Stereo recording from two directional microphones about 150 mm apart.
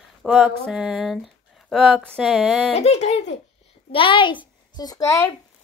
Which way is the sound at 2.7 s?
45° left (ahead or behind).